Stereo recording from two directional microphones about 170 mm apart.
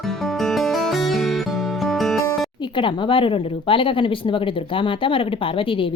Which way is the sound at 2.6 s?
30° left (ahead or behind).